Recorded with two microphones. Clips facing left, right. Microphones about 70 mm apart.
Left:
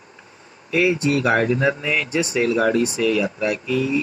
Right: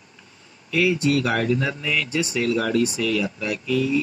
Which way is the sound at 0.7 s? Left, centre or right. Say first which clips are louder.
Left 2 dB; left.